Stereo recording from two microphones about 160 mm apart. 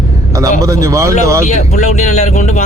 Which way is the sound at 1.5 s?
45° left (ahead or behind).